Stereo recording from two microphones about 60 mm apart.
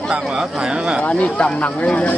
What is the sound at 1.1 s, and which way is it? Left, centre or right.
Speech, centre.